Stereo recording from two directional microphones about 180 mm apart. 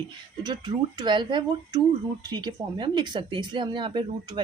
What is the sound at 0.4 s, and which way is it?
Speech, 25° right (ahead or behind).